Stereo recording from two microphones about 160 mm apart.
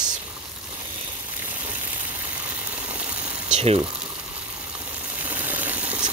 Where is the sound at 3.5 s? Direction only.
40° right (ahead or behind).